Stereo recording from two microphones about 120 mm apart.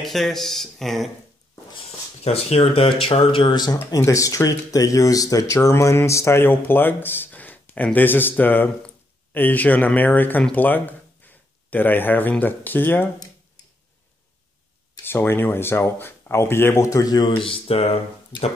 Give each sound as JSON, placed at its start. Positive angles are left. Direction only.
{"t": 0.0, "sound": "speech", "side_deg": 0}
{"t": 1.9, "sound": "speech", "side_deg": 60}
{"t": 15.0, "sound": "speech", "side_deg": 20}
{"t": 17.3, "sound": "speech", "side_deg": 50}